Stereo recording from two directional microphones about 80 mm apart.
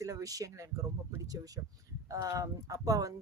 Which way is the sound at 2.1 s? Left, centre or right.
Right.